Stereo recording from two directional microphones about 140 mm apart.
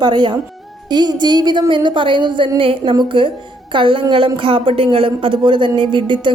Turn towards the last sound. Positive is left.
turn(degrees=-35)  # may be behind; listen again after turning